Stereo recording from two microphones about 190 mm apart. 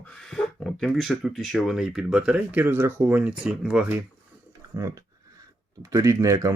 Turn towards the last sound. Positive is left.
turn(degrees=-15)  # may be behind; listen again after turning